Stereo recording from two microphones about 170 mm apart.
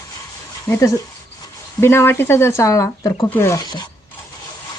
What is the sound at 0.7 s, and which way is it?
Speech, 20° left (ahead or behind).